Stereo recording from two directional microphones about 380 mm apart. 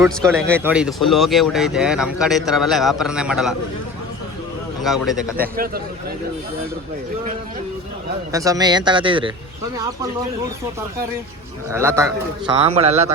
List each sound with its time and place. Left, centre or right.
0.0 s speech: centre
4.8 s speech: centre
5.4 s a man's voice: right
8.3 s a man's voice: centre
11.7 s a man's voice: centre